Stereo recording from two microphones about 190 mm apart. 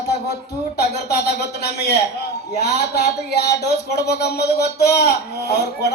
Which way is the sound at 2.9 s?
60° left (ahead or behind).